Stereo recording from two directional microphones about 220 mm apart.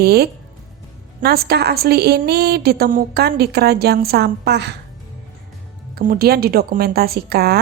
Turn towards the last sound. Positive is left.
turn(degrees=-45)  # may be behind; listen again after turning